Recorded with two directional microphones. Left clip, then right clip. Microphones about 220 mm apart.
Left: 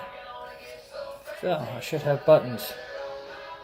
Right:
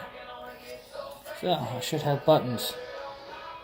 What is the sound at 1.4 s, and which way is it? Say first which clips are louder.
Speech: even; 50° right (ahead or behind).